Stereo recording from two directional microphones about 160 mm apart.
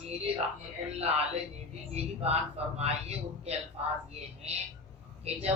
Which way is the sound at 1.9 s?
40° right (ahead or behind).